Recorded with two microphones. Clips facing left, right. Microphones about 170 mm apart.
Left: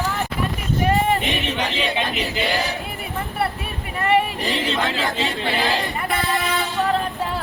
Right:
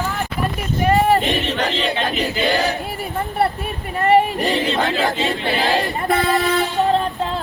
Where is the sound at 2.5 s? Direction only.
65° right (ahead or behind).